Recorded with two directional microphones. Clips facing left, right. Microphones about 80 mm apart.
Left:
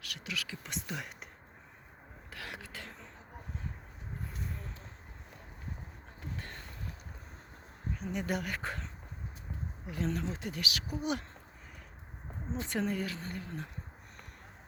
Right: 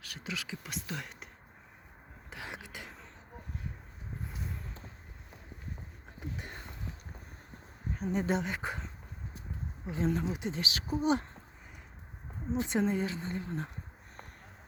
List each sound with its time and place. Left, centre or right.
0.0 s speech: right
0.6 s speech: centre
2.3 s a sound: right
6.1 s a sound: centre
7.9 s speech: right
12.5 s speech: centre